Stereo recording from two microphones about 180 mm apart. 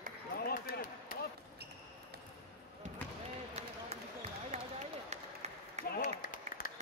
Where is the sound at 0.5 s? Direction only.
55° left (ahead or behind).